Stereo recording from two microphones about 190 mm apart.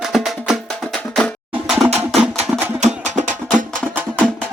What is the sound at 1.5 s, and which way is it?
Music, 10° right (ahead or behind).